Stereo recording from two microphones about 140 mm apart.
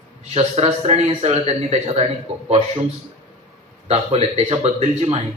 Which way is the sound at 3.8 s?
50° right (ahead or behind).